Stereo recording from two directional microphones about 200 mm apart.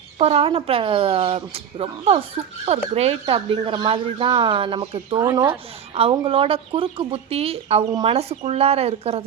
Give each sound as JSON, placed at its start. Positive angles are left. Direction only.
{"t": 0.2, "sound": "speech", "side_deg": -30}
{"t": 5.2, "sound": "speech", "side_deg": -15}
{"t": 5.9, "sound": "speech", "side_deg": -30}